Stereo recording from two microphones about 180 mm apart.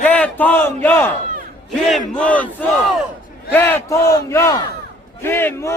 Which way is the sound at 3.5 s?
10° left (ahead or behind).